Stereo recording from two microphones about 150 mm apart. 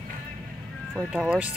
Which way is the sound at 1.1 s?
10° right (ahead or behind).